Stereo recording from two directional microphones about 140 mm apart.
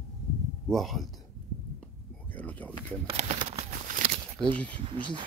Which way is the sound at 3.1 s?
50° right (ahead or behind).